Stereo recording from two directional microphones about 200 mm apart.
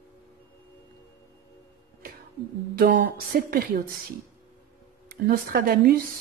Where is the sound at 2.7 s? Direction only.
50° right (ahead or behind).